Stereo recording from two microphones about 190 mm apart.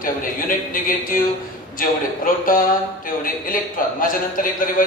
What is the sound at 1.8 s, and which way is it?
A man's voice, 50° left (ahead or behind).